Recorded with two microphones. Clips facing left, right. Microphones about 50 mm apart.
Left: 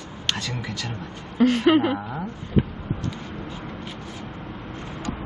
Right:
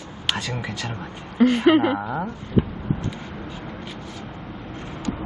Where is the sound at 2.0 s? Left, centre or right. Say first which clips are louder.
Right 5 dB; right.